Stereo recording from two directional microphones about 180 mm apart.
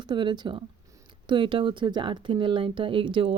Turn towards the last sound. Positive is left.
turn(degrees=-30)  # may be behind; listen again after turning